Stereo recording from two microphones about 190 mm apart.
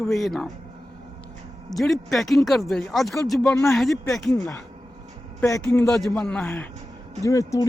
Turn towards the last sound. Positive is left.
turn(degrees=15)  # may be behind; listen again after turning